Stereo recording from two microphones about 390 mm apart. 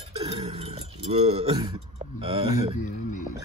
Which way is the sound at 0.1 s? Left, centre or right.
Centre.